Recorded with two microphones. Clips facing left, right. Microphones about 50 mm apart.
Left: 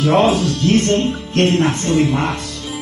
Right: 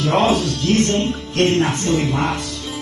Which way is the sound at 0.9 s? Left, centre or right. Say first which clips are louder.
Left 2 dB; centre.